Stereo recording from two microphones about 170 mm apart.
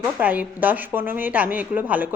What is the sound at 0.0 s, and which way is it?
A woman's voice, 10° right (ahead or behind).